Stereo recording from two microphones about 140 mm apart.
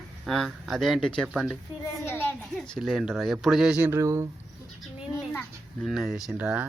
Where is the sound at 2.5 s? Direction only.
5° left (ahead or behind).